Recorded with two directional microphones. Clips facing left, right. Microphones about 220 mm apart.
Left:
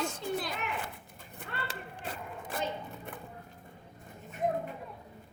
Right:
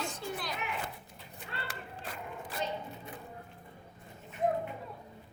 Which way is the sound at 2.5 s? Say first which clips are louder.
Left 2 dB; 50° left (ahead or behind).